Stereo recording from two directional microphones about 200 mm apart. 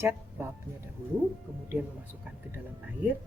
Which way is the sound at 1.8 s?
5° right (ahead or behind).